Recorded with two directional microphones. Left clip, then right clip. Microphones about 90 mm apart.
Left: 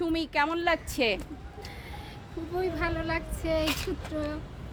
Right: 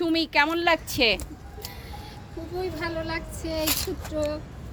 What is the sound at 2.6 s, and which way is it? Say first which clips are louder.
Speech: even; 25° left (ahead or behind).